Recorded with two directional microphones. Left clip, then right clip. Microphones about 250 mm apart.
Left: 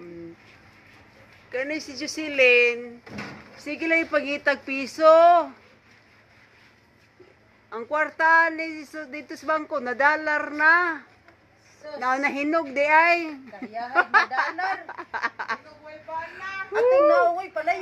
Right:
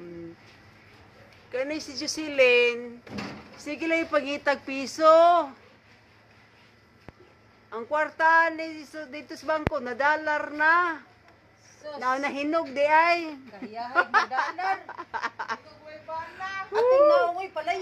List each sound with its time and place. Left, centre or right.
1.5 s a woman's voice: centre
7.7 s speech: centre
16.3 s a sound: centre